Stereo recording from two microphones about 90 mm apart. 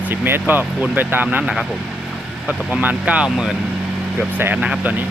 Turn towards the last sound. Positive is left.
turn(degrees=-10)  # may be behind; listen again after turning